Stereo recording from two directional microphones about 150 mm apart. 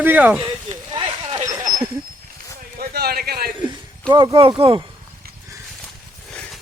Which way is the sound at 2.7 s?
90° right.